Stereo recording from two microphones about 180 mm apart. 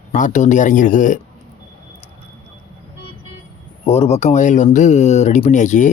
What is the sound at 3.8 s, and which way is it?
Speech, 35° left (ahead or behind).